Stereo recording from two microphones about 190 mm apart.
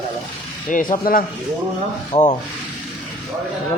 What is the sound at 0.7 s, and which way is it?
A man's voice, 45° left (ahead or behind).